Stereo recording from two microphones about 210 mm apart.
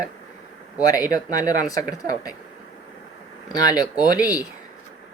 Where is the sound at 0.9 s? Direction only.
15° left (ahead or behind).